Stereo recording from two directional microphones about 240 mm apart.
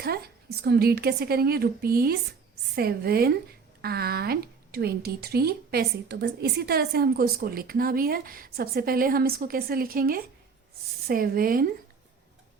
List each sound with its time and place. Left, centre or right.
0.6 s a woman's voice: right